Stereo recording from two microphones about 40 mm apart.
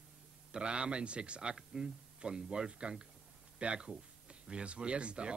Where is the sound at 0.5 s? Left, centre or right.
Right.